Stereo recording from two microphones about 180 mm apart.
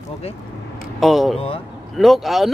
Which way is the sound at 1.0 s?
Centre (ahead or behind).